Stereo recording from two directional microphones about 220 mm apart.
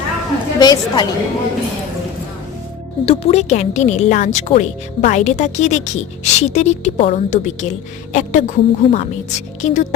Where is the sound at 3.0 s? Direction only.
25° left (ahead or behind).